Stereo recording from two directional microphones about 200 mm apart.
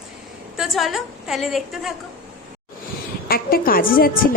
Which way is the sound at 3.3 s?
45° left (ahead or behind).